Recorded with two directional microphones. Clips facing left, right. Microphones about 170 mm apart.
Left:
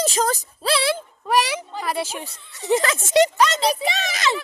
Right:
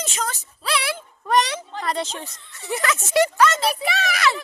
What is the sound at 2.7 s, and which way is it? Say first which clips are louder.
Speech: left 5 dB; 25° left (ahead or behind).